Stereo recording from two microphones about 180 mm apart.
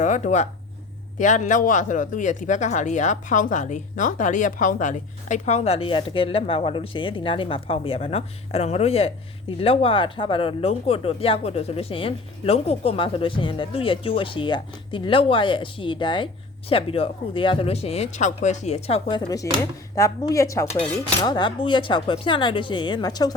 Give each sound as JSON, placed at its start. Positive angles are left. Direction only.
{"t": 0.0, "sound": "speech", "side_deg": 40}
{"t": 20.7, "sound": "cutlery", "side_deg": 5}
{"t": 21.2, "sound": "speech", "side_deg": 25}